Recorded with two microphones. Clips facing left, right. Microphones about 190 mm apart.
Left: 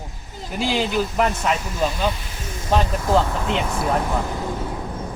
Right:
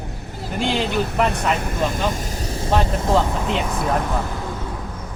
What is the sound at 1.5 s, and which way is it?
Speech, 55° right (ahead or behind).